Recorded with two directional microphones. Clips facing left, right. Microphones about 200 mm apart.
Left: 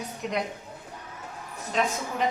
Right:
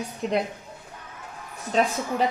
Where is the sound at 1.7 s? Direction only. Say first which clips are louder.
Right 4 dB; 35° right (ahead or behind).